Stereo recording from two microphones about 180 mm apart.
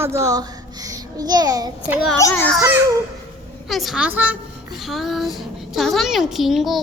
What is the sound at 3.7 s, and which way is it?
A child's voice, centre (ahead or behind).